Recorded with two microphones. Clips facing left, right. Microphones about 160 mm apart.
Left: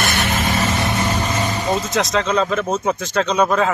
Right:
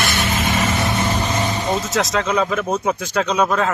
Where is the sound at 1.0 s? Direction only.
10° right (ahead or behind).